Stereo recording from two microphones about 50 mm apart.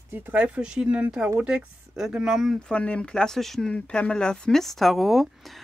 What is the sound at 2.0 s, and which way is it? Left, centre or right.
Speech, centre.